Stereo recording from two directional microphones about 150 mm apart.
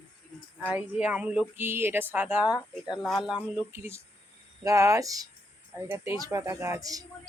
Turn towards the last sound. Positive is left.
turn(degrees=-25)  # may be behind; listen again after turning